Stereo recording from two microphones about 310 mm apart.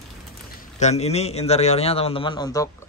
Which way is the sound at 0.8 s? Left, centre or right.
Left.